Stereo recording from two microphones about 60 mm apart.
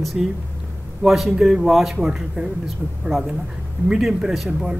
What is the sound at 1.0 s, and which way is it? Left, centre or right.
Speech, centre.